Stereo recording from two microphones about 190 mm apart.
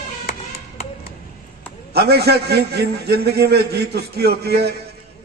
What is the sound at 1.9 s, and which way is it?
A man's voice, 60° right (ahead or behind).